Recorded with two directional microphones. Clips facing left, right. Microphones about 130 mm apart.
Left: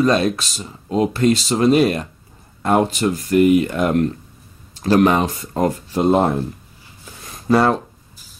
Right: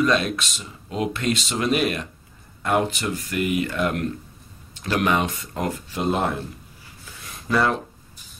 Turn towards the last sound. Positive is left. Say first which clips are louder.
# left 6 dB
turn(degrees=40)  # may be behind; listen again after turning